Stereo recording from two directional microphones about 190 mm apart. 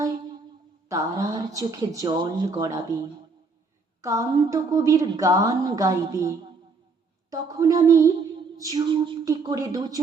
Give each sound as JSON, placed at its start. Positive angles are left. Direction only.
{"t": 0.9, "sound": "a woman's voice", "side_deg": -15}
{"t": 4.0, "sound": "a woman's voice", "side_deg": -15}